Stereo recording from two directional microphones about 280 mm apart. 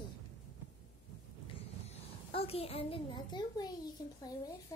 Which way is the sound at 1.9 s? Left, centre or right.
Left.